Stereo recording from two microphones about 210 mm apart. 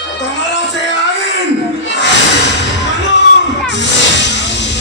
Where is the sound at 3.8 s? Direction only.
55° left (ahead or behind).